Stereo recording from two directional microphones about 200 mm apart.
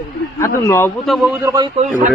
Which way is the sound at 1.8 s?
40° right (ahead or behind).